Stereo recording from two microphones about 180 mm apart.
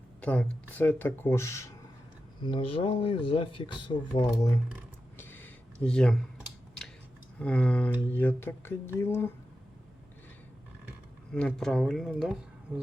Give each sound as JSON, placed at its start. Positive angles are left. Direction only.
{"t": 0.2, "sound": "speech", "side_deg": 10}
{"t": 2.4, "sound": "speech", "side_deg": 30}
{"t": 4.2, "sound": "speech", "side_deg": 15}
{"t": 5.1, "sound": "a sound", "side_deg": 10}
{"t": 7.3, "sound": "speech", "side_deg": 5}
{"t": 11.3, "sound": "speech", "side_deg": 5}